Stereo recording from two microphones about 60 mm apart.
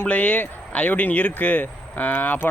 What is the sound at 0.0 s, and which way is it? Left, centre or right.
Speech, left.